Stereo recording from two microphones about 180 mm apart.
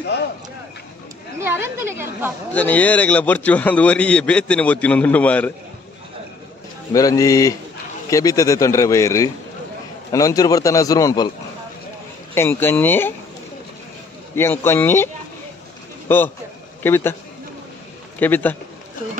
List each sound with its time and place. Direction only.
1.4 s a woman's voice: 15° right (ahead or behind)
2.5 s a man's voice: 10° left (ahead or behind)
6.9 s a man's voice: 20° left (ahead or behind)
12.4 s a man's voice: 10° left (ahead or behind)
14.3 s a man's voice: 15° left (ahead or behind)
16.1 s a man's voice: 10° left (ahead or behind)
18.2 s a man's voice: 10° left (ahead or behind)